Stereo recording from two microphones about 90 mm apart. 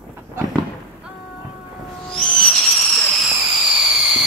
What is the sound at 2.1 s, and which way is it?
Owl, 5° left (ahead or behind).